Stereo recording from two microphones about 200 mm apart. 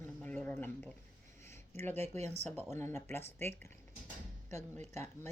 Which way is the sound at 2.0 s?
35° right (ahead or behind).